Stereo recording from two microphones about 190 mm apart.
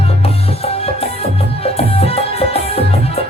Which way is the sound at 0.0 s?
30° left (ahead or behind).